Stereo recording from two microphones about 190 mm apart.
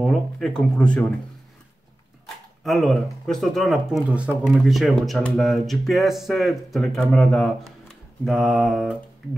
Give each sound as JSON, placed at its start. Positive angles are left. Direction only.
{"t": 0.0, "sound": "speech", "side_deg": 0}
{"t": 2.6, "sound": "speech", "side_deg": 0}